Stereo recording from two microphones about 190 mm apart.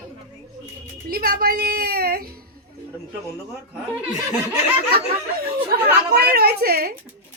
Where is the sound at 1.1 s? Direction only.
50° right (ahead or behind).